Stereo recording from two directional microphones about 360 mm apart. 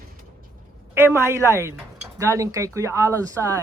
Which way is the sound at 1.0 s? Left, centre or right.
Centre.